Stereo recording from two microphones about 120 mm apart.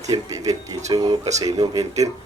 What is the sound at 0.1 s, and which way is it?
Speech, 30° right (ahead or behind).